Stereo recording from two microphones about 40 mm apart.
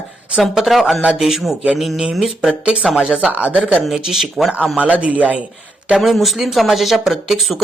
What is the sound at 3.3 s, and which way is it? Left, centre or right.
Speech, right.